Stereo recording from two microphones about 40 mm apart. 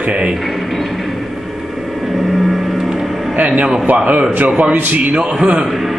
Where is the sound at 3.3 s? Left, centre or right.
Right.